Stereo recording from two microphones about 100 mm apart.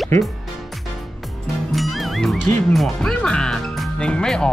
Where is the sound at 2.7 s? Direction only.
5° left (ahead or behind).